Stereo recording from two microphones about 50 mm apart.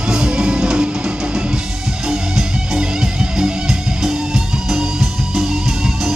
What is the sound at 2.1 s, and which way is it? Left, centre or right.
Music, centre.